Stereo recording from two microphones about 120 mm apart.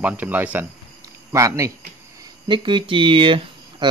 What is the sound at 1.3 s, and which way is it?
Speech, 25° right (ahead or behind).